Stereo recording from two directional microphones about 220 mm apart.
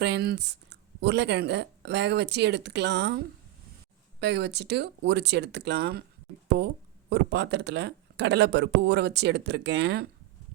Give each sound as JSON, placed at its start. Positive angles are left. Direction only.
{"t": 0.0, "sound": "speech", "side_deg": -50}
{"t": 7.1, "sound": "speech", "side_deg": -50}